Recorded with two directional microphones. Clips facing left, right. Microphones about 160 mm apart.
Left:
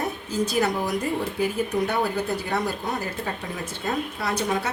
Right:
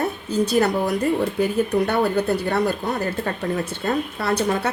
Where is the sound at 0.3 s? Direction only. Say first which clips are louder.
Right 4 dB; 65° right (ahead or behind).